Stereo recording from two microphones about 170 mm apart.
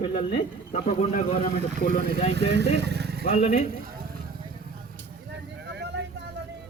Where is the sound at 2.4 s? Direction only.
90° right; by 3.2 s 70° right (ahead or behind).